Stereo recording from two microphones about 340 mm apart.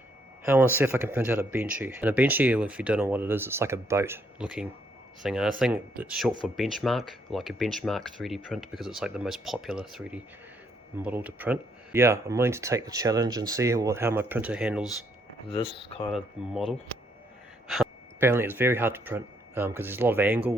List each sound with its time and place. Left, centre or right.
0.4 s speech: centre
15.4 s speech: centre
17.7 s speech: centre